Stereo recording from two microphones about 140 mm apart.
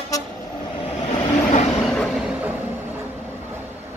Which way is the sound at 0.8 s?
50° left (ahead or behind).